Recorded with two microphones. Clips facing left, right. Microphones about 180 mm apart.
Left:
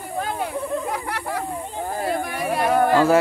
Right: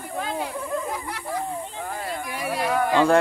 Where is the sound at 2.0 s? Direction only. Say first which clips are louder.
Left 6 dB; 55° left (ahead or behind).